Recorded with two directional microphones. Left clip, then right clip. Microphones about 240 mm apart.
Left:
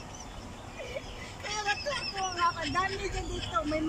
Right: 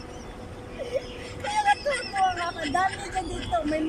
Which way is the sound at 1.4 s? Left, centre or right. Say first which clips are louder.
Right 9 dB; right.